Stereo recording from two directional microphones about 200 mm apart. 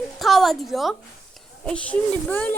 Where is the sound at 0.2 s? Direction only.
Centre (ahead or behind).